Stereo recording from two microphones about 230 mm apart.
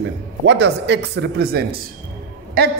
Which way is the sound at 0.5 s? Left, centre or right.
Right.